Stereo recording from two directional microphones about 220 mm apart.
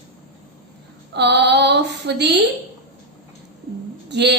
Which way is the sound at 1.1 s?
50° right (ahead or behind).